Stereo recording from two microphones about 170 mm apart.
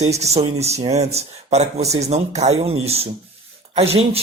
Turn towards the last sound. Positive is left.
turn(degrees=-35)  # may be behind; listen again after turning